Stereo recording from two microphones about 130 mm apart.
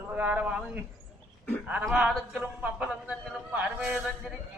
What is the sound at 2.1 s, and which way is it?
A man's voice, 10° right (ahead or behind).